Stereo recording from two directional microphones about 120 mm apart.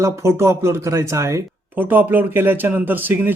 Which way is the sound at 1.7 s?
15° right (ahead or behind).